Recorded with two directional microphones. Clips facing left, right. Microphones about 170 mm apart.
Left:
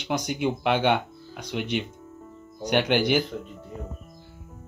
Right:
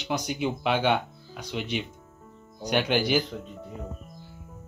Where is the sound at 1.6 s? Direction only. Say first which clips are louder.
Left 3 dB; 60° left (ahead or behind).